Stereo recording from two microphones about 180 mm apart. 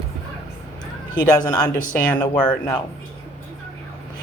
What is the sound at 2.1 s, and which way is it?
Speech, 10° left (ahead or behind).